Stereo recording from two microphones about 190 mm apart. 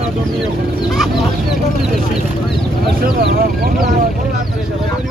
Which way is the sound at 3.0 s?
50° right (ahead or behind).